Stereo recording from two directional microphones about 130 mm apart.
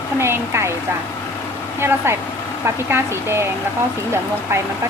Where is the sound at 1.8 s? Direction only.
20° right (ahead or behind).